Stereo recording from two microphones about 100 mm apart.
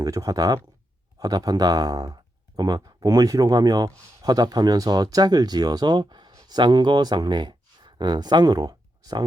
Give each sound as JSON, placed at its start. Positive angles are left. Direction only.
{"t": 0.0, "sound": "speech", "side_deg": -35}